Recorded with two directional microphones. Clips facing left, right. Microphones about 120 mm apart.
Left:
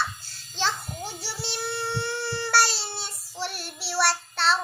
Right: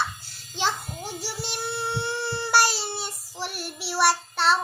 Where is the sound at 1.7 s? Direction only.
20° right (ahead or behind).